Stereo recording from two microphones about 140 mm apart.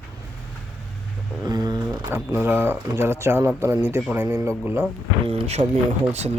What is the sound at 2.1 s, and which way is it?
Speech, 15° right (ahead or behind).